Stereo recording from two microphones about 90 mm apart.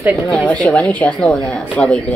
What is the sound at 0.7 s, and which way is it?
A woman's voice, 15° left (ahead or behind).